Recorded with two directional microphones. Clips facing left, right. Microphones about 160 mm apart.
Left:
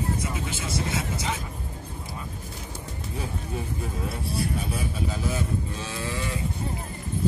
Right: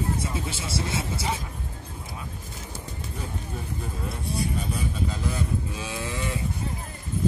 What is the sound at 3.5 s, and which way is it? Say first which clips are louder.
Speech: left 3 dB; 5° left (ahead or behind).